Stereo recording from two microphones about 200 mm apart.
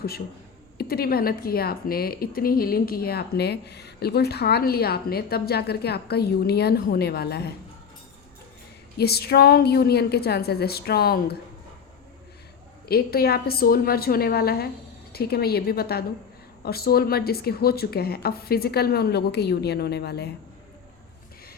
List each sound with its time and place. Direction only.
0.8 s speech: 50° left (ahead or behind)
9.0 s speech: 50° left (ahead or behind)
12.8 s speech: 50° left (ahead or behind)